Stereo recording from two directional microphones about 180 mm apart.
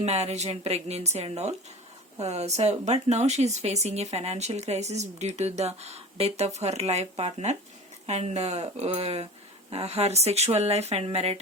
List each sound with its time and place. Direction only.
0.0 s speech: 35° right (ahead or behind)